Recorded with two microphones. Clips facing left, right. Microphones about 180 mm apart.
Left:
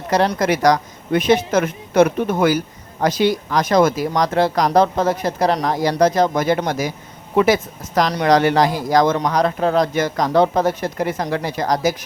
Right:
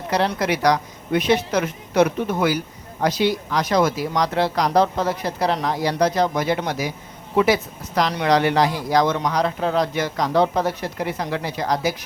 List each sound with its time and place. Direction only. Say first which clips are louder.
0.1 s speech: left 4 dB; 45° left (ahead or behind)